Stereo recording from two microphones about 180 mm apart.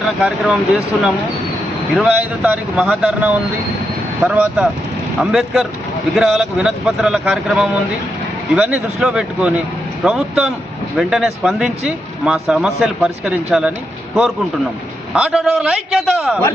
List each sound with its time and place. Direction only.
0.2 s speech: centre (ahead or behind)
2.0 s speech: 5° right (ahead or behind)
15.1 s speech: 5° right (ahead or behind)